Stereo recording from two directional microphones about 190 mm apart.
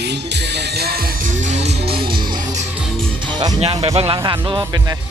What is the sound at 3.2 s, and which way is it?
Speech, 25° right (ahead or behind).